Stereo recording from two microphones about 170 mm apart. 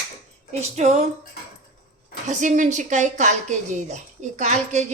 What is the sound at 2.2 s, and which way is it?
A woman's voice, 45° right (ahead or behind).